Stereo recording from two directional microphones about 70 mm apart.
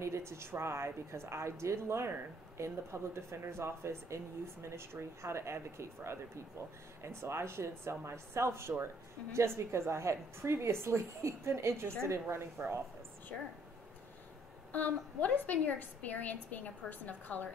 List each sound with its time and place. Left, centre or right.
0.0 s a woman's voice: right
14.7 s a woman's voice: left